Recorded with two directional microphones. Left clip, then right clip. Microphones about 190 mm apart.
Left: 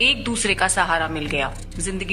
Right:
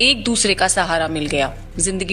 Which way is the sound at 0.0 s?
45° right (ahead or behind).